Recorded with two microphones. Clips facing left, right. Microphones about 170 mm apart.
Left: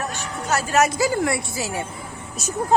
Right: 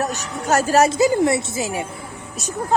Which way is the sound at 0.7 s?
25° right (ahead or behind).